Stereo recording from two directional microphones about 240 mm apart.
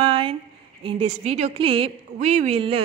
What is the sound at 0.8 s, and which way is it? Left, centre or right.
A woman's voice, right.